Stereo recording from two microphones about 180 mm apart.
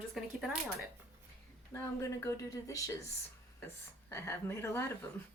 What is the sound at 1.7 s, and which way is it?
Speech, 15° left (ahead or behind).